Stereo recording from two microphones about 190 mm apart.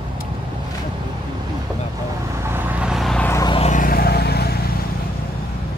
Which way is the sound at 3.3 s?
15° left (ahead or behind).